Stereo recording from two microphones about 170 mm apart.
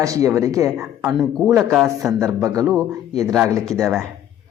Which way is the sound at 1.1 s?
Centre (ahead or behind).